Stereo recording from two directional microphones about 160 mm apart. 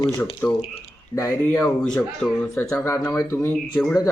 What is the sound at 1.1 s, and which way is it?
Speech, 20° left (ahead or behind).